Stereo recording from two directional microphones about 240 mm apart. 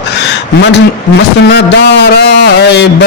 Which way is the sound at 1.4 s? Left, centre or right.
Left.